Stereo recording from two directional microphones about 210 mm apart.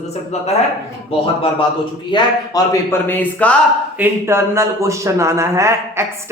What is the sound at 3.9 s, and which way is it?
A man's voice, 10° right (ahead or behind).